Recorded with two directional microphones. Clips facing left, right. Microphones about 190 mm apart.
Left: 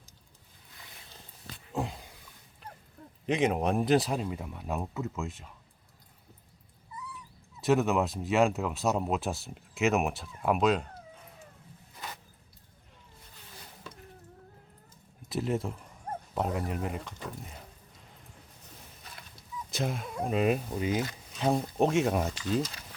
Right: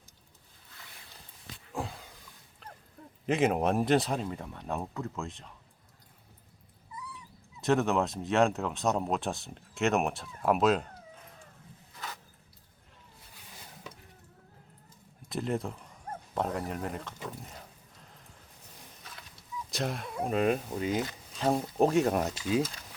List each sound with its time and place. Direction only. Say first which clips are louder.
1.7 s a sound: left 3 dB; 20° left (ahead or behind)
3.2 s speech: right 1 dB; 5° right (ahead or behind)
7.6 s speech: left 1 dB; centre (ahead or behind)
15.3 s speech: left 1 dB; centre (ahead or behind)
19.7 s speech: left 1 dB; centre (ahead or behind)